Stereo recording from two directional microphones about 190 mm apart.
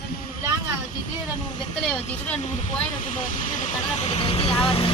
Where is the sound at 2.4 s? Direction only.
40° left (ahead or behind).